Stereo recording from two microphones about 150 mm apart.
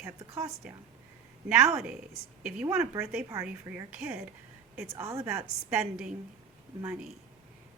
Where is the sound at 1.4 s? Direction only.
5° right (ahead or behind).